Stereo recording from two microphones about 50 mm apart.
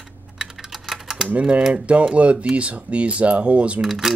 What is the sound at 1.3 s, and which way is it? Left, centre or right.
Speech, right.